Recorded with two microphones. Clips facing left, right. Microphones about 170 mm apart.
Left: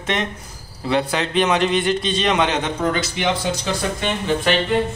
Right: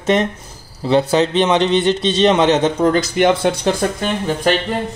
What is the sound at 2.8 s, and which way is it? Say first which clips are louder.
Speech: right 7 dB; 40° right (ahead or behind).